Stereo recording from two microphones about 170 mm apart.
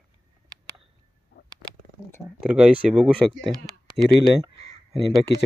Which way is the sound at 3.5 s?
20° right (ahead or behind).